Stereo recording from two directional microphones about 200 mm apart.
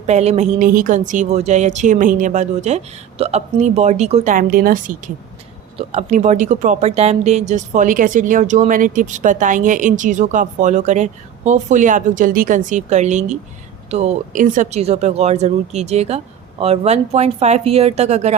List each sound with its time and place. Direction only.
0.1 s speech: 35° right (ahead or behind)